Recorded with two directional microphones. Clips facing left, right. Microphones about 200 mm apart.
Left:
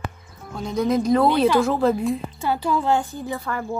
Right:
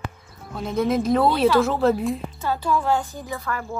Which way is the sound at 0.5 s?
5° right (ahead or behind).